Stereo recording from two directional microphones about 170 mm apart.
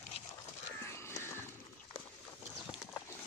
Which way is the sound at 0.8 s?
15° left (ahead or behind).